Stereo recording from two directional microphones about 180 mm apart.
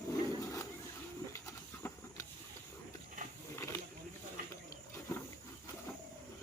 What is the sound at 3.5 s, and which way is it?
Snake, 15° left (ahead or behind).